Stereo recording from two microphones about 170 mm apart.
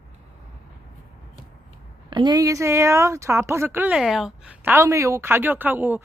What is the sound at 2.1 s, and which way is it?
Speech, 25° right (ahead or behind).